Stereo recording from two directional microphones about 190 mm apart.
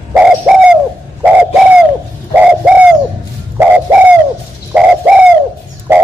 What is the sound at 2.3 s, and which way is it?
Bird, 5° right (ahead or behind).